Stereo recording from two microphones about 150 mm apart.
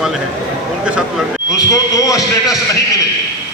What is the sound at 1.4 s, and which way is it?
Speech, 25° left (ahead or behind).